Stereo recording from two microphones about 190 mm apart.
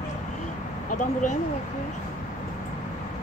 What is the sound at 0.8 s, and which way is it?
Speech, 40° left (ahead or behind).